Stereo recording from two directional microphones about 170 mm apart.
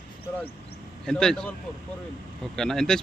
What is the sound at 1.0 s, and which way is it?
Speech, 5° left (ahead or behind).